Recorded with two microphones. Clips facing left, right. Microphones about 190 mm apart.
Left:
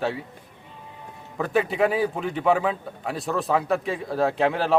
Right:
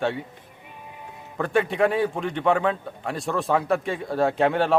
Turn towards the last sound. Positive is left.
turn(degrees=0)  # may be behind; listen again after turning